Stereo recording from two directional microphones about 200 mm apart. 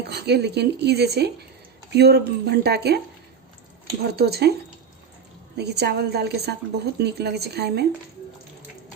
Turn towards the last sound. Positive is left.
turn(degrees=-55)  # may be behind; listen again after turning